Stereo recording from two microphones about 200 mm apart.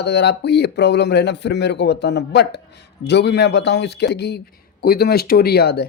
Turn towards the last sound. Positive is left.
turn(degrees=55)  # may be behind; listen again after turning